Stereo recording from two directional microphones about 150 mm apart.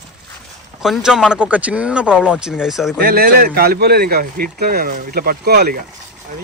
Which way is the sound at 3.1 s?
85° right.